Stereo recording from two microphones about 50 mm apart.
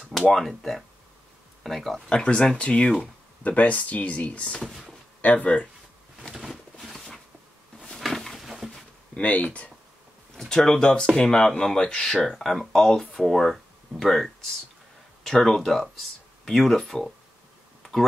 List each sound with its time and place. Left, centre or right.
0.3 s speech: centre
2.0 s speech: left
4.6 s speech: centre
5.2 s speech: left
6.4 s a sound: centre
9.1 s speech: left
10.3 s speech: centre
12.3 s speech: centre